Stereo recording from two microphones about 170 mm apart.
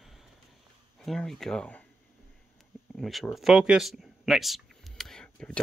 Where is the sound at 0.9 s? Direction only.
5° left (ahead or behind).